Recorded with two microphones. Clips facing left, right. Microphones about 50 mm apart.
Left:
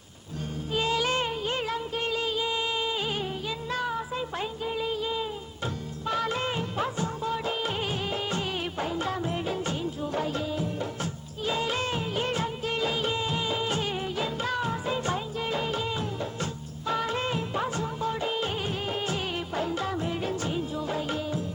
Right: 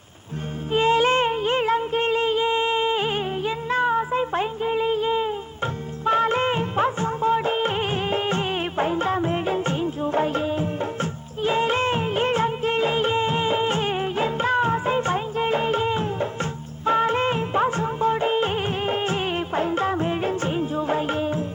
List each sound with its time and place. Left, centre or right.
0.7 s music: right
6.1 s music of bollywood: right